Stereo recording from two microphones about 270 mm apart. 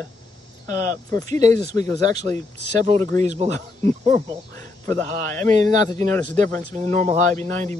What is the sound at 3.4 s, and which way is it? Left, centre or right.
Speech, right.